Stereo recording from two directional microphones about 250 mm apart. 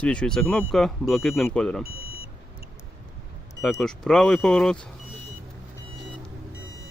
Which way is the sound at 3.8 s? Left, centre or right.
Centre.